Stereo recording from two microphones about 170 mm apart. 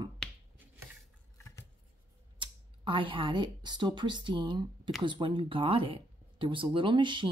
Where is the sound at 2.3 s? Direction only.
30° right (ahead or behind).